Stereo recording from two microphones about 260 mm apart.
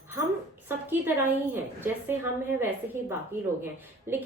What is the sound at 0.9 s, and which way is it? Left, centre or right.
A woman's voice, centre.